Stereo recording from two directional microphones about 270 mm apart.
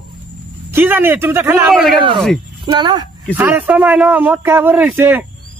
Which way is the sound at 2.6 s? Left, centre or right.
Centre.